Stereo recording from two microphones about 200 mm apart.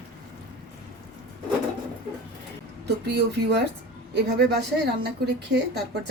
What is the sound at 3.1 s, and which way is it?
A woman's voice, 55° right (ahead or behind).